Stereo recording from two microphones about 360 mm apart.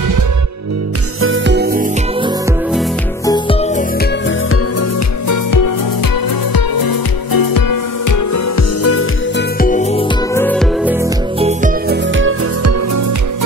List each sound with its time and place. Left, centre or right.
1.2 s music: right
3.3 s music: centre
4.0 s music: left
5.3 s music: left
6.5 s music: left
9.6 s music: left
10.3 s music: centre
11.3 s music: centre